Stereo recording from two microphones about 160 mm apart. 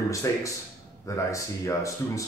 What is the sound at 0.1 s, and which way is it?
Speech, 20° left (ahead or behind).